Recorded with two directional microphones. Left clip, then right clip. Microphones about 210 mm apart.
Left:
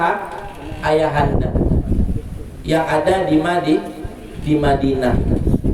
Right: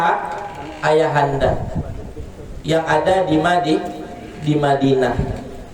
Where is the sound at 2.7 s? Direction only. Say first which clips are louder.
Even; 10° left (ahead or behind).